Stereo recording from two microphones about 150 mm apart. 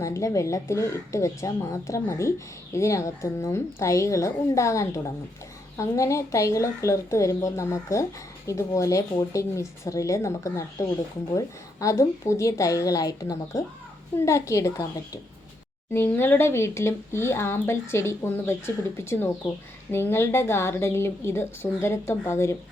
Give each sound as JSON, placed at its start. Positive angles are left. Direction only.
{"t": 0.0, "sound": "speech", "side_deg": 20}